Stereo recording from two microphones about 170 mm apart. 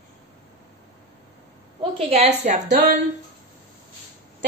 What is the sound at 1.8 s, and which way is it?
A woman's voice, 35° right (ahead or behind).